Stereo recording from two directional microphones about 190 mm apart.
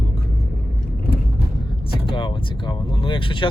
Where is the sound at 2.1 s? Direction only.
25° left (ahead or behind).